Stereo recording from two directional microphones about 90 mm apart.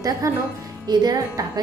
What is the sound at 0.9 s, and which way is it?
Speech, 45° right (ahead or behind).